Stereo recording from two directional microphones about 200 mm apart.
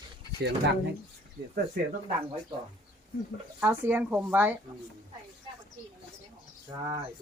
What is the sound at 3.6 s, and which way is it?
Speech, 10° right (ahead or behind).